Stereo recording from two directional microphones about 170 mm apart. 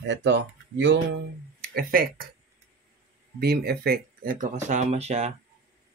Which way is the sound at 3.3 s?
70° right (ahead or behind).